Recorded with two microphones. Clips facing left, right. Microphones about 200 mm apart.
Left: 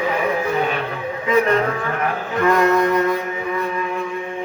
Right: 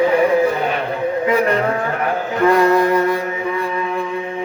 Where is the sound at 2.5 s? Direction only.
30° right (ahead or behind).